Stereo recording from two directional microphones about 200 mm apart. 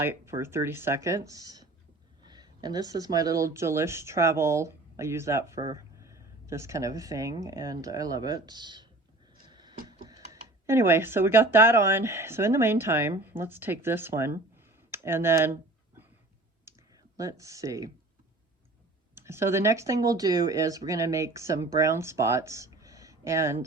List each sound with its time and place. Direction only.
0.0 s speech: 10° right (ahead or behind)
9.5 s tick-tock: 20° right (ahead or behind)
10.7 s speech: 10° right (ahead or behind)
16.7 s clicking: 15° right (ahead or behind)
17.2 s speech: 15° right (ahead or behind)
19.1 s speech: 10° right (ahead or behind)